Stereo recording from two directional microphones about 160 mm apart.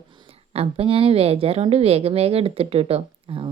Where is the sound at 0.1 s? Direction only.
30° right (ahead or behind).